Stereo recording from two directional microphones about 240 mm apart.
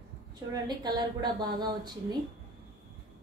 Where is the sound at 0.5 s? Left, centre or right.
Centre.